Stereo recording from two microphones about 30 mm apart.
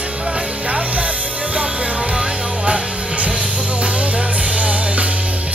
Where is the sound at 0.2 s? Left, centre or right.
Right.